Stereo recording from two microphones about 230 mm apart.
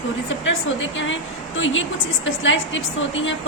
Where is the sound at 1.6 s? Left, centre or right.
Left.